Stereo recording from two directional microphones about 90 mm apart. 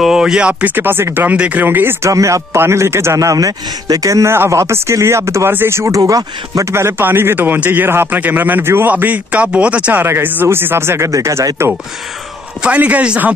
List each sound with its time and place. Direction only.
0.0 s speech: 5° right (ahead or behind); by 2.0 s 20° right (ahead or behind)
2.0 s a man's voice: 35° right (ahead or behind)
6.7 s speech: 30° right (ahead or behind)
12.6 s speech: 15° right (ahead or behind)